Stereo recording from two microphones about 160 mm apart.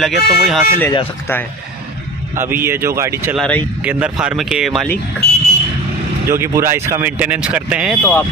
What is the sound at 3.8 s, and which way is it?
Speech, 5° right (ahead or behind).